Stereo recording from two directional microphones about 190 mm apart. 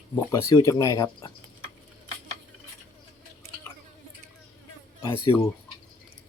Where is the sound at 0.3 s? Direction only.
20° left (ahead or behind).